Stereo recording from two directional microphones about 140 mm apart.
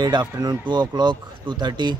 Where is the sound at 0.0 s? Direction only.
30° right (ahead or behind).